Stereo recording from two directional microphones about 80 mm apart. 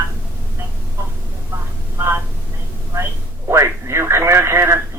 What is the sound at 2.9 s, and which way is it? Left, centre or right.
Speech, right.